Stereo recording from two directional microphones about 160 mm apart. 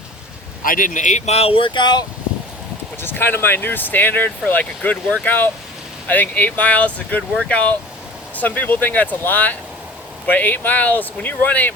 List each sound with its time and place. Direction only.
0.6 s speech: 60° left (ahead or behind); by 2.0 s 25° left (ahead or behind)
3.0 s speech: 15° left (ahead or behind)